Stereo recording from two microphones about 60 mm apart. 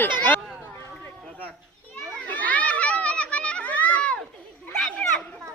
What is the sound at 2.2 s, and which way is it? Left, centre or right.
Children playing, left.